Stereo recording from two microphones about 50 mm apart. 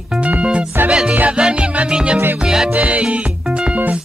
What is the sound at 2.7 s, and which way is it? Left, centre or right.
Music, right.